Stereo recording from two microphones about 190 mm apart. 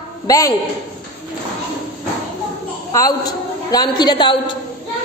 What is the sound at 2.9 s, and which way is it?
A woman's voice, 20° left (ahead or behind).